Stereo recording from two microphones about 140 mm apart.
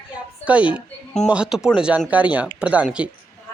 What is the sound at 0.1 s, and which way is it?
A woman's voice, 10° right (ahead or behind).